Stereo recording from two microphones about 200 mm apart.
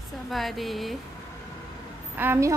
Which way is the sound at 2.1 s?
10° right (ahead or behind).